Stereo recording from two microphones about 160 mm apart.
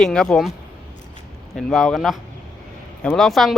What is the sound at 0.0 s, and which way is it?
Speech, 5° left (ahead or behind).